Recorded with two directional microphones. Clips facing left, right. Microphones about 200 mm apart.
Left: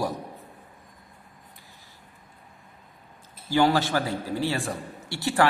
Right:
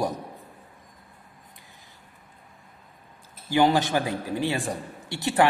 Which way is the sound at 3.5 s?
15° right (ahead or behind).